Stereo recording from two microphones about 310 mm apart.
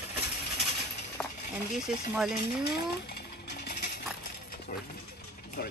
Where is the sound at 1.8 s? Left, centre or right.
Centre.